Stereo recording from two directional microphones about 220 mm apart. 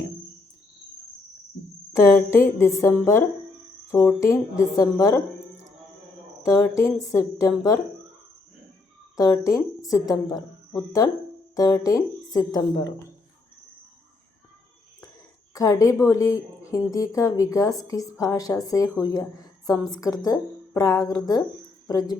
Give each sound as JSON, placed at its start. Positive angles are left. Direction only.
{"t": 2.1, "sound": "a woman's voice", "side_deg": 10}
{"t": 6.4, "sound": "a woman's voice", "side_deg": 15}
{"t": 9.1, "sound": "a woman's voice", "side_deg": 15}
{"t": 15.5, "sound": "a woman's voice", "side_deg": 15}